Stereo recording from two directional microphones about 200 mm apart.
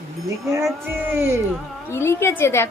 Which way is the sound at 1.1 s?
10° right (ahead or behind).